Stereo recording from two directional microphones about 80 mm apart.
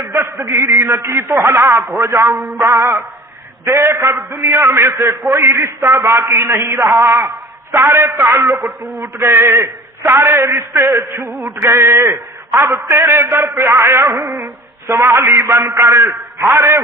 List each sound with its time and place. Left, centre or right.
0.0 s a man's voice: right